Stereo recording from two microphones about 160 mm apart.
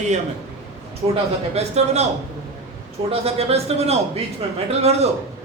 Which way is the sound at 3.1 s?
40° right (ahead or behind).